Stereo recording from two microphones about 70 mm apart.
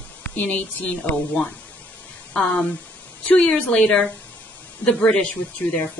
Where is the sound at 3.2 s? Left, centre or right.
Centre.